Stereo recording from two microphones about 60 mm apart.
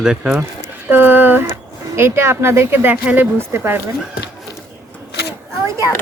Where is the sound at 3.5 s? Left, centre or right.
Right.